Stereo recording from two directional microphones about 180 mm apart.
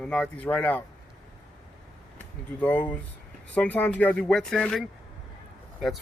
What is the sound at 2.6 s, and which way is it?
Speech, 5° left (ahead or behind).